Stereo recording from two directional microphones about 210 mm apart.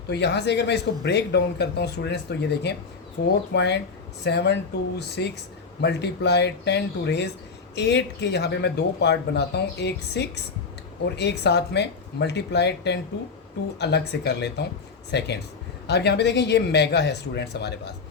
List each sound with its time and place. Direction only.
0.1 s speech: 55° left (ahead or behind)